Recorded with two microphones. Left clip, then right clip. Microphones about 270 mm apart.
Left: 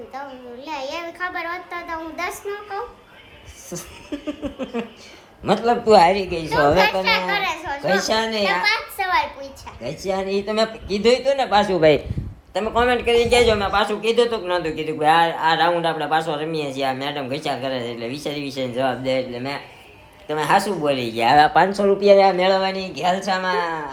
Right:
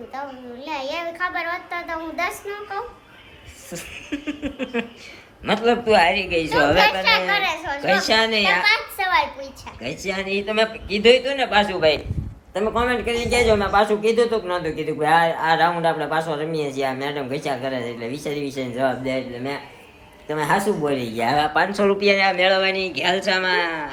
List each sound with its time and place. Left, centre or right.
0.1 s a man's voice: centre
12.5 s a man's voice: centre
21.3 s speech: left
21.7 s a woman's voice: centre